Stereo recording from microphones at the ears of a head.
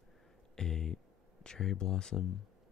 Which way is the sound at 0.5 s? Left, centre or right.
Left.